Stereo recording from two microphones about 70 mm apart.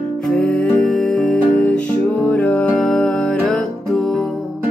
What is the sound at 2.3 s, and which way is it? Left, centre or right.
Music, left.